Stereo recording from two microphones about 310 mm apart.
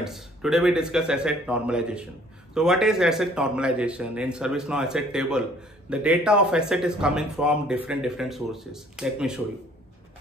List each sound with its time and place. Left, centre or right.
0.0 s speech: centre